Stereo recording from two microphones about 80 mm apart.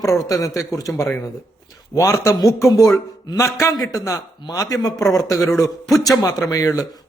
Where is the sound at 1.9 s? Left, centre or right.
Left.